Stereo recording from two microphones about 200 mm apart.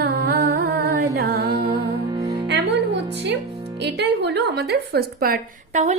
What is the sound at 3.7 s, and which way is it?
A woman's voice, 60° right (ahead or behind).